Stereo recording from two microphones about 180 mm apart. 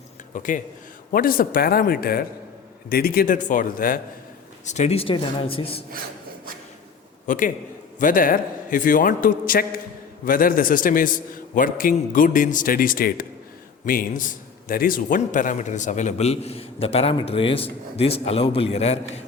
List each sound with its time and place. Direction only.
0.3 s a man's voice: 45° left (ahead or behind)
4.6 s a man's voice: 40° left (ahead or behind)
7.3 s a man's voice: 45° left (ahead or behind)